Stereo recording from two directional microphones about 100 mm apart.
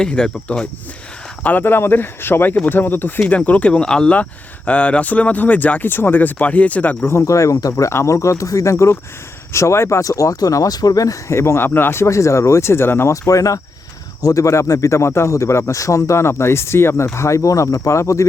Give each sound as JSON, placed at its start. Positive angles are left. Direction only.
{"t": 0.0, "sound": "speech", "side_deg": 5}
{"t": 1.5, "sound": "speech", "side_deg": 20}